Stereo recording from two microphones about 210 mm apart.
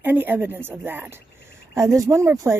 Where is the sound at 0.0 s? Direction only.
10° right (ahead or behind).